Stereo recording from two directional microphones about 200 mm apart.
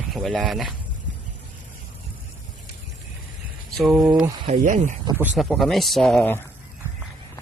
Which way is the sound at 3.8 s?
Centre (ahead or behind).